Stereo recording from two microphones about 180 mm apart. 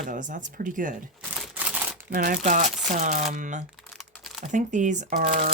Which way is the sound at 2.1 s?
50° right (ahead or behind).